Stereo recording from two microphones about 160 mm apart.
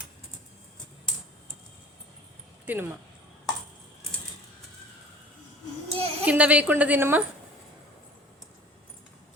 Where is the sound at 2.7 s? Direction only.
10° right (ahead or behind).